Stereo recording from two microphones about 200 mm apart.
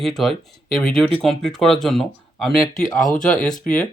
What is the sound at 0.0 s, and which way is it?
A man's voice, centre (ahead or behind).